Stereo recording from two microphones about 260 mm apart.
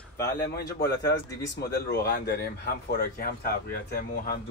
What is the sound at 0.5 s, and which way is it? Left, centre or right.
A man's voice, left.